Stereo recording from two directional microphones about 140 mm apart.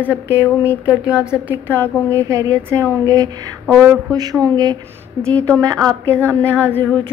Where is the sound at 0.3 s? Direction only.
15° right (ahead or behind).